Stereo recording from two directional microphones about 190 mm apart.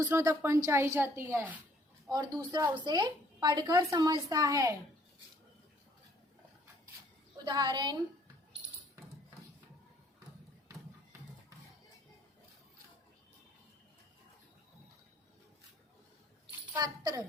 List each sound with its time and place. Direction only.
0.0 s a woman's voice: 15° right (ahead or behind)
7.4 s a woman's voice: 20° right (ahead or behind)
16.7 s a woman's voice: 20° right (ahead or behind)